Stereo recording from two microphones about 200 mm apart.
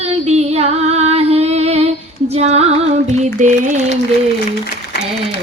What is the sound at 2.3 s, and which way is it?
Music, 30° right (ahead or behind).